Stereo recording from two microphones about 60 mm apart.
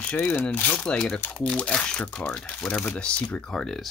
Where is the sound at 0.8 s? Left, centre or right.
Centre.